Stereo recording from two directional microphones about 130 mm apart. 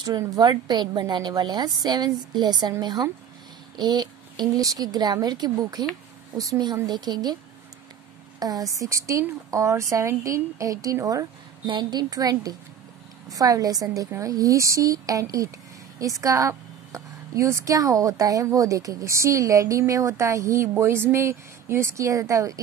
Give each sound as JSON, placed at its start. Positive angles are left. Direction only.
{"t": 0.0, "sound": "a woman's voice", "side_deg": -30}
{"t": 8.4, "sound": "speech", "side_deg": -30}